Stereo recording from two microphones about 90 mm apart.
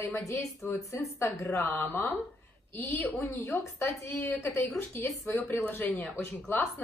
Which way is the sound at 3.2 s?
30° left (ahead or behind).